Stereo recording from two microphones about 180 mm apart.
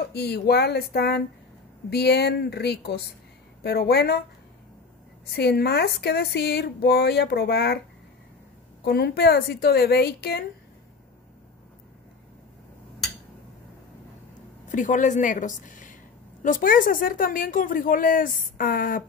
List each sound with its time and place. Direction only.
0.1 s speech: 65° left (ahead or behind)
5.2 s speech: 65° left (ahead or behind)
8.8 s speech: 65° left (ahead or behind)
14.7 s a woman's voice: 45° left (ahead or behind)